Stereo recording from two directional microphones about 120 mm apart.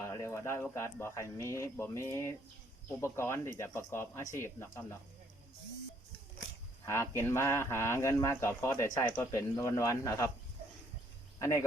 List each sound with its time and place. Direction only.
0.0 s a sound: 25° left (ahead or behind)
0.6 s speech: 20° left (ahead or behind)
6.8 s speech: 20° left (ahead or behind)
11.3 s speech: 25° left (ahead or behind)